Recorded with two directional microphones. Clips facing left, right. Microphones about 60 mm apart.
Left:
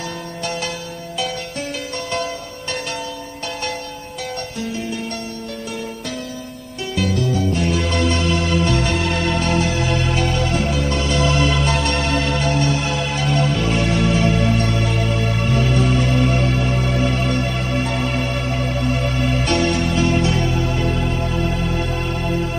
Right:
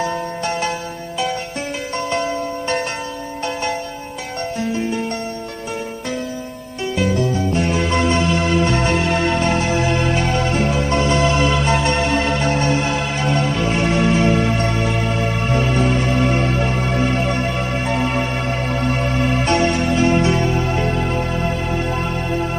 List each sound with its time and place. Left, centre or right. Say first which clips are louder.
0.0 s music: right 6 dB; right
2.0 s music: right 5 dB; right
6.9 s music: right 1 dB; right
19.5 s music: right 2 dB; right